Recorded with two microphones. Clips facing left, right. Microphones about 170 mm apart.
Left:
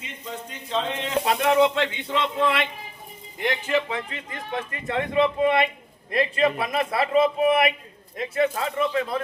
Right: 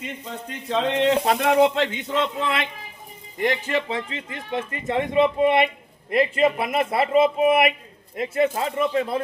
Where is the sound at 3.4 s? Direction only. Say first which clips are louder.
Right 1 dB; 40° right (ahead or behind).